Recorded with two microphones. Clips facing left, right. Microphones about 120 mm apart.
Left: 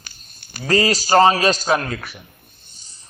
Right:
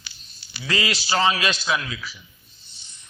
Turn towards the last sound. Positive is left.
turn(degrees=40)  # may be behind; listen again after turning